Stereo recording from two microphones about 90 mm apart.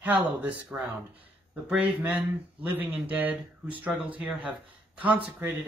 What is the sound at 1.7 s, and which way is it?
Speech, 20° right (ahead or behind).